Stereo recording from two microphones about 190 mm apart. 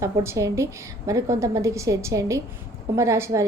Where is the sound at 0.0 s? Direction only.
15° right (ahead or behind).